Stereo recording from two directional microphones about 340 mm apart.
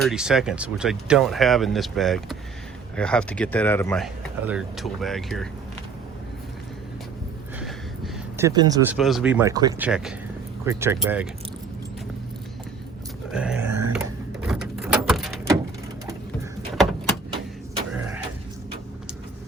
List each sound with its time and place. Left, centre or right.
0.0 s speech: centre
7.6 s speech: centre
13.3 s speech: centre
13.7 s a sound: right
13.9 s a sound: centre
16.7 s door: centre